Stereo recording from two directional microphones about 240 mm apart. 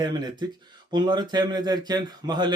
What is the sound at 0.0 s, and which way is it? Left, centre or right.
A man's voice, centre.